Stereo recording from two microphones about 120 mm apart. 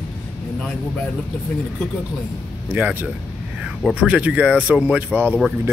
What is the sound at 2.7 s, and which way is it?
Speech, 15° right (ahead or behind).